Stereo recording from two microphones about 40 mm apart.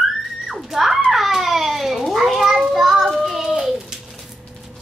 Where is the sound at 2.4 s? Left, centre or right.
Centre.